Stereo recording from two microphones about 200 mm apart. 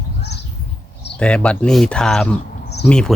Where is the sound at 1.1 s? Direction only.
5° left (ahead or behind).